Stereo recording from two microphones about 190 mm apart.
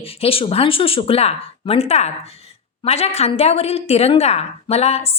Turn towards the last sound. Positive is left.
turn(degrees=30)  # may be behind; listen again after turning